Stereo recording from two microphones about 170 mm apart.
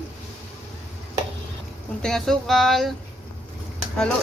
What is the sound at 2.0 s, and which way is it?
Speech, 5° left (ahead or behind).